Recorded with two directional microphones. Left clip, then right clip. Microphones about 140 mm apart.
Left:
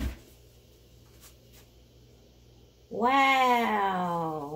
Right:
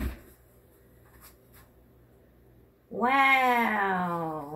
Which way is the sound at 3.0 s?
35° left (ahead or behind).